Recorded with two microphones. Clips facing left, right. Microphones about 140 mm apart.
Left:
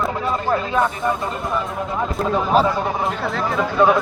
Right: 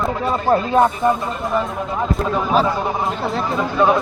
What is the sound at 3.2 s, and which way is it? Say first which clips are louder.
Speech: right 1 dB; 20° right (ahead or behind).